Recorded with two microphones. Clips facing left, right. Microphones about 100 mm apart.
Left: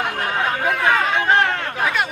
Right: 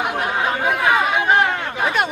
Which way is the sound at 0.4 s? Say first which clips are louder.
Even; 10° right (ahead or behind).